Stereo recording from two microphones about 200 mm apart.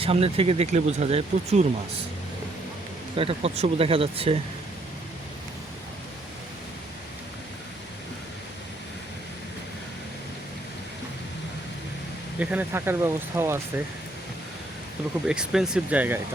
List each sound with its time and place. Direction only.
0.0 s speech: 30° right (ahead or behind)
3.2 s speech: 30° right (ahead or behind)
12.4 s speech: 5° right (ahead or behind)
15.3 s speech: 5° right (ahead or behind)